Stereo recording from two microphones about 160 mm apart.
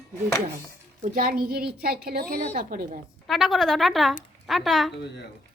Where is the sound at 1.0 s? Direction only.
60° right (ahead or behind).